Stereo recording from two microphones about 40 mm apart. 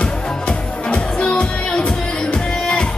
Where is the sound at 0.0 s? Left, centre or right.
Left.